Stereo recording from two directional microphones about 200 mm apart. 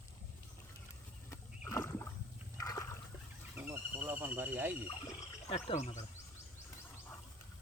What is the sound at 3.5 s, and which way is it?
Speech, 10° right (ahead or behind).